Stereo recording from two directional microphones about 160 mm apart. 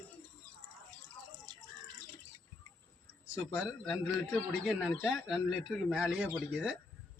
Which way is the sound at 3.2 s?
15° left (ahead or behind).